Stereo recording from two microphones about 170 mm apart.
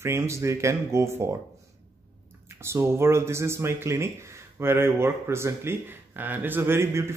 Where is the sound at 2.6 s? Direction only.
15° right (ahead or behind).